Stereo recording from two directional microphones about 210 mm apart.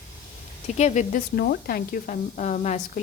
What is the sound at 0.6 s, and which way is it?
Speech, 35° left (ahead or behind).